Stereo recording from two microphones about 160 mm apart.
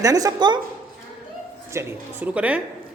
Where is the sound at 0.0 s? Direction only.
20° right (ahead or behind).